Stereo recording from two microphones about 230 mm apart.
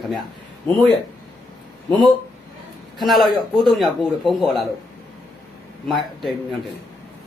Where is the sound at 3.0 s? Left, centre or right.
Centre.